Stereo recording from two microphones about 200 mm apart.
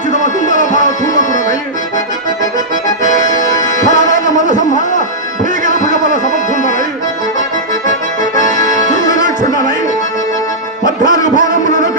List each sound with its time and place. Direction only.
0.5 s music: 40° left (ahead or behind)
3.1 s accordion: 40° right (ahead or behind)
3.3 s music: 40° left (ahead or behind)
9.0 s music: 40° left (ahead or behind)
11.1 s music: 40° left (ahead or behind)